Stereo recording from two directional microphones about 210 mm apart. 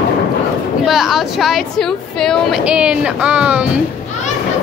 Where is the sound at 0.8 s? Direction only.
Centre (ahead or behind).